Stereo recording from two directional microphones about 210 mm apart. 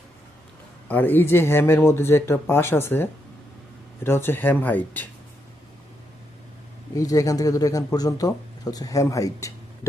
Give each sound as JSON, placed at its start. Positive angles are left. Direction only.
{"t": 0.9, "sound": "speech", "side_deg": 10}
{"t": 6.9, "sound": "speech", "side_deg": 15}